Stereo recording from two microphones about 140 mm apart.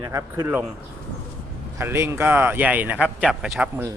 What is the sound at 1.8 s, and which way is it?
Speech, 20° right (ahead or behind).